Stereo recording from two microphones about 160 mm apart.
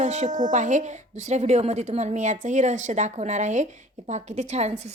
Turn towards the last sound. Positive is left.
turn(degrees=-45)  # may be behind; listen again after turning